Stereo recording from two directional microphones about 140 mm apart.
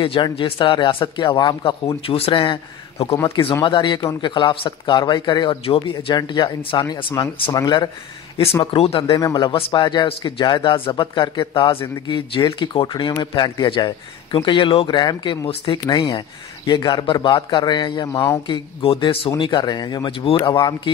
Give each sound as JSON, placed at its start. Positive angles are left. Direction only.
{"t": 0.0, "sound": "speech", "side_deg": 40}
{"t": 8.7, "sound": "speech", "side_deg": 45}
{"t": 9.1, "sound": "speech", "side_deg": 30}
{"t": 18.5, "sound": "speech", "side_deg": 40}